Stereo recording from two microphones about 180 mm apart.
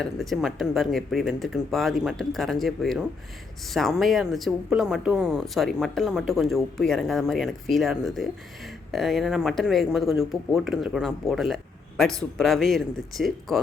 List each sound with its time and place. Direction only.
0.0 s speech: centre (ahead or behind)